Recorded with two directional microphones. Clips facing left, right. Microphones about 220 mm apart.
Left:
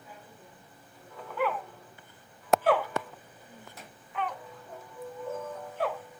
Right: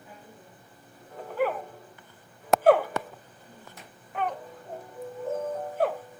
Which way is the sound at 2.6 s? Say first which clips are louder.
Right 9 dB; 45° right (ahead or behind).